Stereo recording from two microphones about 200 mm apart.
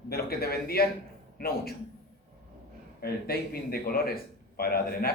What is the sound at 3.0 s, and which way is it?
A man's voice, 50° left (ahead or behind).